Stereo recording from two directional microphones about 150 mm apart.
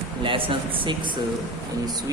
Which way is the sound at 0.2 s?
35° right (ahead or behind).